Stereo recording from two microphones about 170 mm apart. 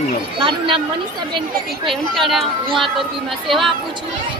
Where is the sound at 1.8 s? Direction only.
Centre (ahead or behind).